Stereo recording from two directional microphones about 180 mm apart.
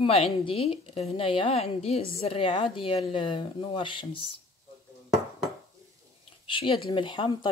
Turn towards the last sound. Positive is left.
turn(degrees=25)  # may be behind; listen again after turning